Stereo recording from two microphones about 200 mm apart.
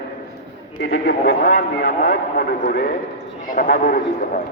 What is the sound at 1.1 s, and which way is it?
Speech, 50° left (ahead or behind).